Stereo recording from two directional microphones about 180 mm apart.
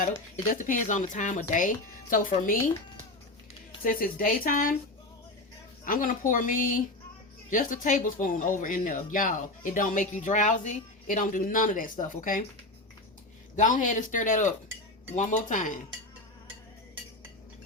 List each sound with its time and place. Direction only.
0.5 s speech: 45° left (ahead or behind)
3.8 s speech: 50° left (ahead or behind)
5.8 s speech: 50° left (ahead or behind)
13.6 s speech: 45° left (ahead or behind)